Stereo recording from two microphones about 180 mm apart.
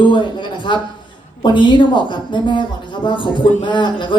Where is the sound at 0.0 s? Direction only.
25° left (ahead or behind).